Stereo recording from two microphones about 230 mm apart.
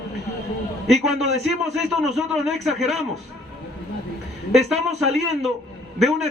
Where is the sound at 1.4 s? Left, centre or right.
Centre.